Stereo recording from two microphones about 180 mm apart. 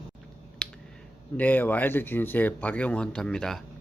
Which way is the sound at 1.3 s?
10° left (ahead or behind).